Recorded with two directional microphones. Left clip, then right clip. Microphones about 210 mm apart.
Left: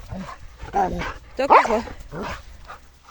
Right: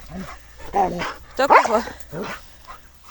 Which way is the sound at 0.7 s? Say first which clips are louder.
Right 2 dB; 20° right (ahead or behind).